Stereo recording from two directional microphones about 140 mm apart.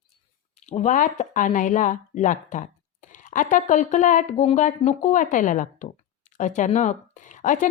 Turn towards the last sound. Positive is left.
turn(degrees=65)  # may be behind; listen again after turning